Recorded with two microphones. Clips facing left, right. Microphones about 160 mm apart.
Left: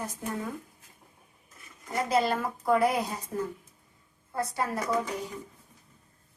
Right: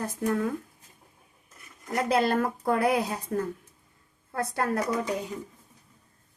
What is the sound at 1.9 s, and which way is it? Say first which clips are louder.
A woman's voice: right 2 dB; 60° right (ahead or behind).